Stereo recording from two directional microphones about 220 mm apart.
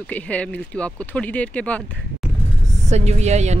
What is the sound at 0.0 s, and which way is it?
Speech, 5° left (ahead or behind).